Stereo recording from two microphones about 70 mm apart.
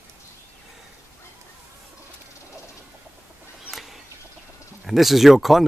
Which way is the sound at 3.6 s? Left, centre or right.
Centre.